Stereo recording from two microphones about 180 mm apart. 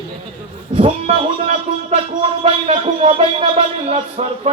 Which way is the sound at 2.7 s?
35° right (ahead or behind).